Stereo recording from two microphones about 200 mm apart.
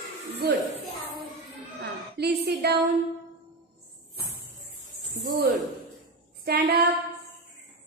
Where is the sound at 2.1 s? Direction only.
55° right (ahead or behind).